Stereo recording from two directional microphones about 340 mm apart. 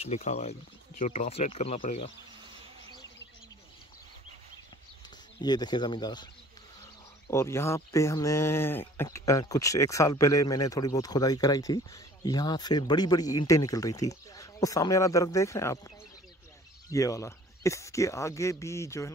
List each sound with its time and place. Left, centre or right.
0.0 s speech: centre
5.4 s speech: centre
7.2 s speech: centre
16.9 s speech: centre